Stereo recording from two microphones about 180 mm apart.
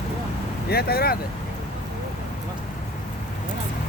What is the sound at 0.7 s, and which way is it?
Speech, 60° left (ahead or behind).